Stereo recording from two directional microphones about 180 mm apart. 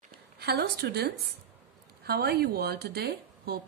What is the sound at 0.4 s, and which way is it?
Speech, 60° right (ahead or behind).